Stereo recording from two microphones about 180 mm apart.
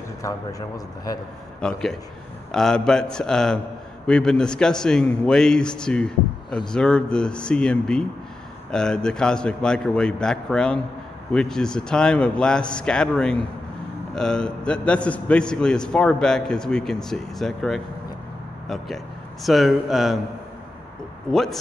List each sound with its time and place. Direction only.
0.2 s a man's voice: 20° left (ahead or behind)
1.6 s a man's voice: 5° left (ahead or behind)
19.4 s a man's voice: centre (ahead or behind)
21.3 s a man's voice: centre (ahead or behind)